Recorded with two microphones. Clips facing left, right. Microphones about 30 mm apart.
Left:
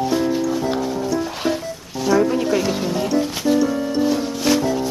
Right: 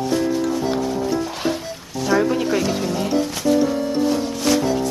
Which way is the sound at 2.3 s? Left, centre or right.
Centre.